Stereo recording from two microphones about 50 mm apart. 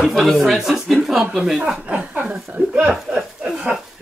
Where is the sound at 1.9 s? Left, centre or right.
Right.